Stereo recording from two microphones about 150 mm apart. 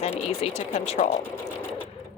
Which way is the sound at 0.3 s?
40° left (ahead or behind).